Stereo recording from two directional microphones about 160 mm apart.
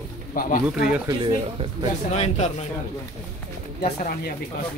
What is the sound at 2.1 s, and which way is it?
Speech, 45° left (ahead or behind).